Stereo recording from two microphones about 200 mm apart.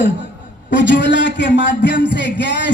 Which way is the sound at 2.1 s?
60° left (ahead or behind).